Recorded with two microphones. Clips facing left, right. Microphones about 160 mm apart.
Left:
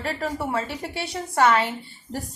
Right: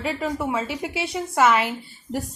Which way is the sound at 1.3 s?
5° right (ahead or behind).